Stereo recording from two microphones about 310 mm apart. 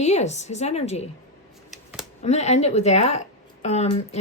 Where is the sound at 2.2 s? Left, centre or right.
Left.